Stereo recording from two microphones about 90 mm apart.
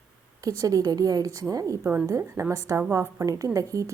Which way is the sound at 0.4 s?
40° right (ahead or behind).